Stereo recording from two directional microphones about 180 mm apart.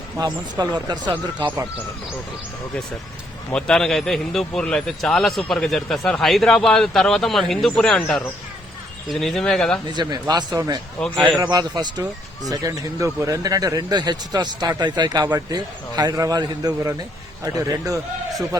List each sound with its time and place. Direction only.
0.2 s speech: 25° right (ahead or behind)
3.5 s speech: 5° left (ahead or behind)
9.9 s speech: 25° right (ahead or behind)